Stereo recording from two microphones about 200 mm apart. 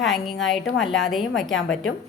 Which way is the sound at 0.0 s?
Centre (ahead or behind).